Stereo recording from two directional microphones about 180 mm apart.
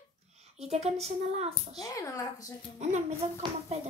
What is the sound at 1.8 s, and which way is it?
Speech, 20° left (ahead or behind).